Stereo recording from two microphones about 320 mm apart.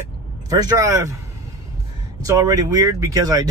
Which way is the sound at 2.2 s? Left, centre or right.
Centre.